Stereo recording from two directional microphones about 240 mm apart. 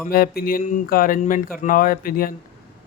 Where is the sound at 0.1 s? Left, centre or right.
Left.